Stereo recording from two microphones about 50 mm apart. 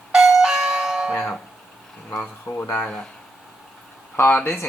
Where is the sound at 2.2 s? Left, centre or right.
Left.